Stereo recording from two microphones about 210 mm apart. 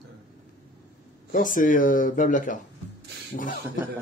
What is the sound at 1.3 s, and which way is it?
Speech, 40° left (ahead or behind).